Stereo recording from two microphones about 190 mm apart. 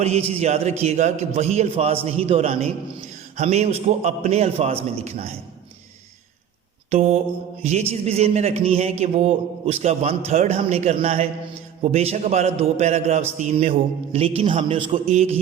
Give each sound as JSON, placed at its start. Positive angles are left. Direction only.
{"t": 0.0, "sound": "speech", "side_deg": -35}
{"t": 6.9, "sound": "speech", "side_deg": -35}